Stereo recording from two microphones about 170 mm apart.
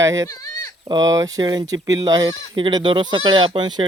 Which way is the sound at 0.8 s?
20° right (ahead or behind).